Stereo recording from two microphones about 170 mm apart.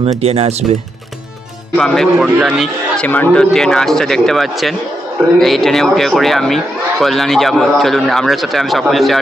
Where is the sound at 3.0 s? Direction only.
10° left (ahead or behind).